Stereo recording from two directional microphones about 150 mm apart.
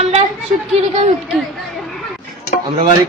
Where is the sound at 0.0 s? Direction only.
45° right (ahead or behind).